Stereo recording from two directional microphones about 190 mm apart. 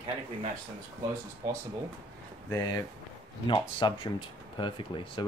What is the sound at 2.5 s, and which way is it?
Speech, 20° left (ahead or behind).